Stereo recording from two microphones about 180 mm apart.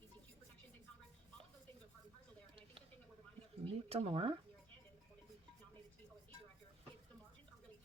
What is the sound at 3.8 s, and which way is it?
Speech, 35° right (ahead or behind).